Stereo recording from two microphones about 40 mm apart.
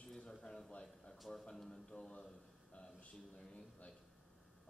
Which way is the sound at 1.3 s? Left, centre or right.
Centre.